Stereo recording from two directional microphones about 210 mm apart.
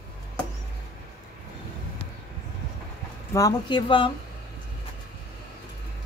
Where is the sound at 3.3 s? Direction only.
20° left (ahead or behind).